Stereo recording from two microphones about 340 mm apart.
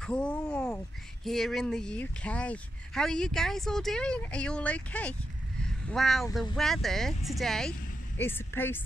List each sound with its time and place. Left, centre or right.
0.0 s a woman's voice: centre